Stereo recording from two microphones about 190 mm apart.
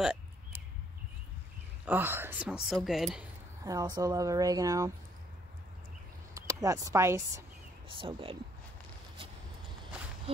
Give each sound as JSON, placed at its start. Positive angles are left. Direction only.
{"t": 0.0, "sound": "a sound", "side_deg": -5}
{"t": 1.9, "sound": "a woman's voice", "side_deg": -10}
{"t": 3.6, "sound": "speech", "side_deg": -20}
{"t": 6.3, "sound": "speech", "side_deg": -15}
{"t": 8.0, "sound": "speech", "side_deg": -30}